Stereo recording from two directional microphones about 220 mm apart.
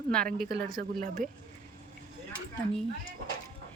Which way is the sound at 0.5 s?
50° right (ahead or behind).